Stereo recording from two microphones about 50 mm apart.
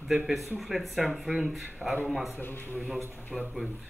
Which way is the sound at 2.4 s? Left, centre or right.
Left.